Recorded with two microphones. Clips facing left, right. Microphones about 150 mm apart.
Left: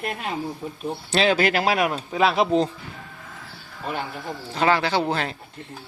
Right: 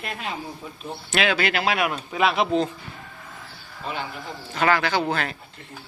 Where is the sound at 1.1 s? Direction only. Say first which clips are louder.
Left 3 dB; 35° left (ahead or behind).